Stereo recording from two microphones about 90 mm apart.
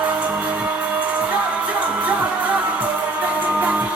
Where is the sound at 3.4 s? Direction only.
15° right (ahead or behind).